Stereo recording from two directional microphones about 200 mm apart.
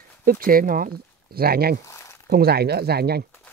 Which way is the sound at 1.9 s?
15° left (ahead or behind).